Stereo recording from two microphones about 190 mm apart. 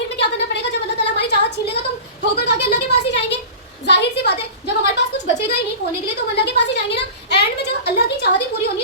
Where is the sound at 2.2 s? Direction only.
60° left (ahead or behind).